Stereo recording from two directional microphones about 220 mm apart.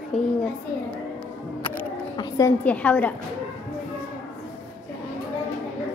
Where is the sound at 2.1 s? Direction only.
15° left (ahead or behind).